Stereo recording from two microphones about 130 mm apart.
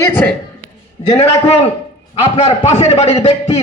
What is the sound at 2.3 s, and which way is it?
Speech, 60° left (ahead or behind).